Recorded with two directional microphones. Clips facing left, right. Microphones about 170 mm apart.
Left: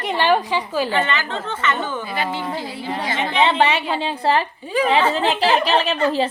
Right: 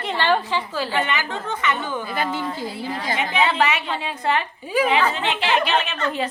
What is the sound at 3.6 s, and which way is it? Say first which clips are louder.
A woman's voice: left 3 dB; 30° left (ahead or behind).